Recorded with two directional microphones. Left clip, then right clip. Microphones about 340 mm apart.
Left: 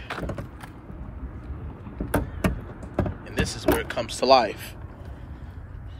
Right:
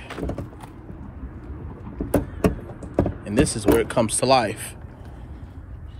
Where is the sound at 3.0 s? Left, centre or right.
Centre.